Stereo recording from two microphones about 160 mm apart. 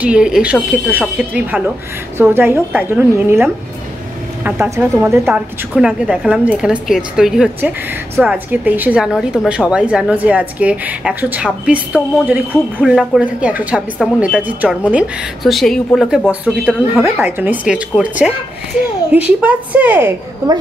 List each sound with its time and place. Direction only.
0.0 s a woman's voice: 5° right (ahead or behind)